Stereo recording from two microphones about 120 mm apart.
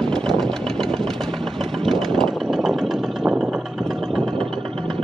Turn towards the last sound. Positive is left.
turn(degrees=-50)  # may be behind; listen again after turning